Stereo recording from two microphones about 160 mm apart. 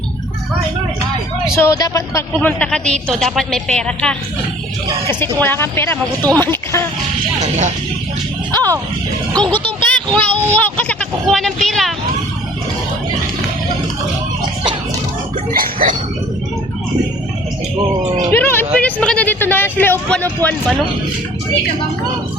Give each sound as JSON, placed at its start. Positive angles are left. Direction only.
{"t": 1.5, "sound": "a woman's voice", "side_deg": 20}
{"t": 5.4, "sound": "speech", "side_deg": 15}
{"t": 8.5, "sound": "speech", "side_deg": -20}
{"t": 9.6, "sound": "speech", "side_deg": 10}
{"t": 15.5, "sound": "a sound", "side_deg": -60}
{"t": 18.3, "sound": "speech", "side_deg": 15}